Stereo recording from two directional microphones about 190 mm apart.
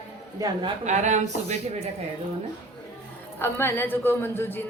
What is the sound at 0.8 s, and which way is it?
Speech, 40° right (ahead or behind).